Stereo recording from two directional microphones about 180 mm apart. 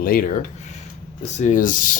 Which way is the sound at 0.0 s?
50° left (ahead or behind).